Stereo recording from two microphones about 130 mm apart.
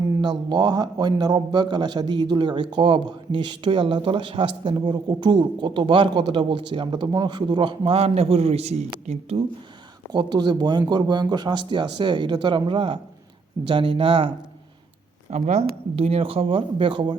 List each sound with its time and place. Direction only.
0.2 s a man's voice: 35° right (ahead or behind); by 9.4 s 60° right (ahead or behind)
10.1 s a man's voice: 35° right (ahead or behind)
15.3 s a man's voice: 60° right (ahead or behind); by 17.2 s 40° right (ahead or behind)